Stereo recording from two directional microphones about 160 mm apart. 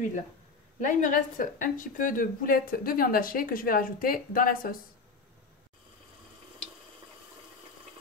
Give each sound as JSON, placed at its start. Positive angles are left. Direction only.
{"t": 0.7, "sound": "a woman's voice", "side_deg": 55}